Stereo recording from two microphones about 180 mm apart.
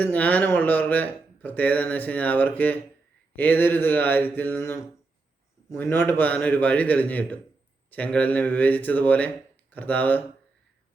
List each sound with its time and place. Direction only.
0.0 s speech: 10° left (ahead or behind)